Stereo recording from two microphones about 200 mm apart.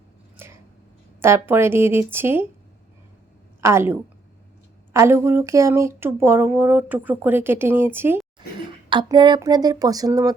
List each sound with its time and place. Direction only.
0.3 s a sound: 10° right (ahead or behind)
1.2 s speech: 10° right (ahead or behind)
3.6 s speech: 15° right (ahead or behind)
4.9 s speech: 15° right (ahead or behind)
8.4 s speech: 25° right (ahead or behind)